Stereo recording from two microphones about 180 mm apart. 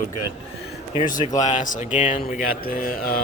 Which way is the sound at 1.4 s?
40° left (ahead or behind).